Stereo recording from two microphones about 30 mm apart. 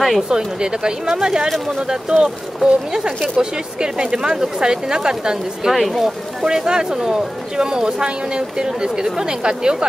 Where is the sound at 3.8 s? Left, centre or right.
Right.